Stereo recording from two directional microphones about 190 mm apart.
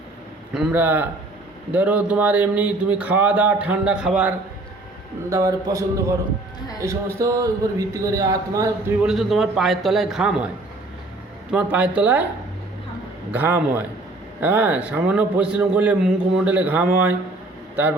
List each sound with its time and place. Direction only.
0.5 s a man's voice: 5° right (ahead or behind)
5.3 s a man's voice: 20° right (ahead or behind)
7.2 s a man's voice: 20° right (ahead or behind)
9.0 s a man's voice: centre (ahead or behind)
11.5 s a man's voice: 5° right (ahead or behind)
13.3 s a man's voice: 10° right (ahead or behind)